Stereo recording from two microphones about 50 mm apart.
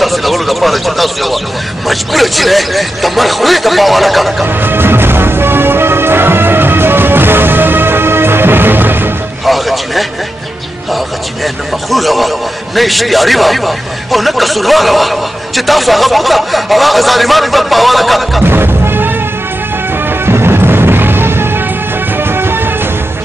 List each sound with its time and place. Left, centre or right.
0.0 s a sound: centre
1.9 s a man's voice: centre
4.5 s music: right
9.4 s music: centre
11.4 s a man's voice: centre
18.4 s music: right